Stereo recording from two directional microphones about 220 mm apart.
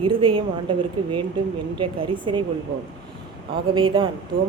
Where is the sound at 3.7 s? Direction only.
25° right (ahead or behind).